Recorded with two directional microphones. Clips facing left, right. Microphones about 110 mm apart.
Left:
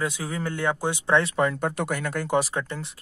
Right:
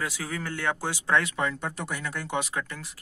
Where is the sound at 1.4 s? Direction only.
45° left (ahead or behind); by 2.9 s 30° left (ahead or behind).